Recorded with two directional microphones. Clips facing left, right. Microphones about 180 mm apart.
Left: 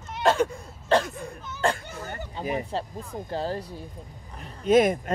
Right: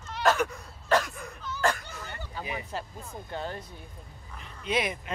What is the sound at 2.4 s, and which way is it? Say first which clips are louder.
Speech: left 7 dB; 25° left (ahead or behind).